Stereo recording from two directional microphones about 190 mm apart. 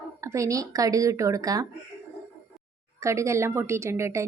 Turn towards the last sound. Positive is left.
turn(degrees=-15)  # may be behind; listen again after turning